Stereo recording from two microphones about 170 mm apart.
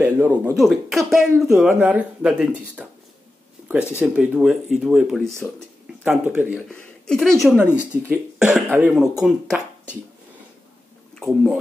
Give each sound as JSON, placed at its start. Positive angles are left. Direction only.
{"t": 0.0, "sound": "speech", "side_deg": -10}
{"t": 6.7, "sound": "a woman's voice", "side_deg": 5}
{"t": 7.6, "sound": "speech", "side_deg": 10}
{"t": 7.9, "sound": "speech", "side_deg": -10}